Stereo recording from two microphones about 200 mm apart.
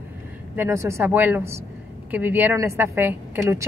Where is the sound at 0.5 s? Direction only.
15° right (ahead or behind).